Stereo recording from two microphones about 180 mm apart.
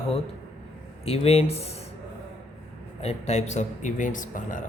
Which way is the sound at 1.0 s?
35° left (ahead or behind).